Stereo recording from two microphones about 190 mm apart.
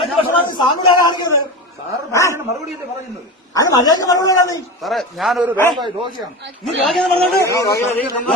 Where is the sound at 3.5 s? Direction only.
20° left (ahead or behind).